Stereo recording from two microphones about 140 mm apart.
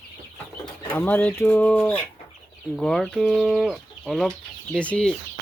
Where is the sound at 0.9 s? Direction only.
10° left (ahead or behind).